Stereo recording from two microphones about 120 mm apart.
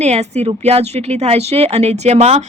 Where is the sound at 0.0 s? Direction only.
65° right (ahead or behind).